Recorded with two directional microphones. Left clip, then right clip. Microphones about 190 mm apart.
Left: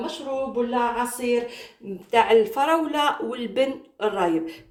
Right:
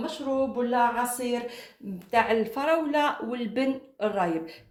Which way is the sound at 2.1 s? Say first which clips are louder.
Left 6 dB; 45° right (ahead or behind).